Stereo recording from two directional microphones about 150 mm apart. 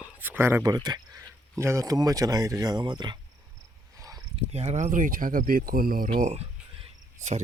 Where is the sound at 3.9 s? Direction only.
20° right (ahead or behind).